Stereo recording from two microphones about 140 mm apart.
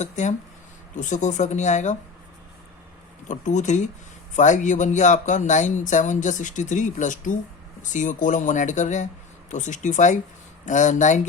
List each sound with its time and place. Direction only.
0.0 s speech: 60° left (ahead or behind)
3.2 s speech: 60° left (ahead or behind)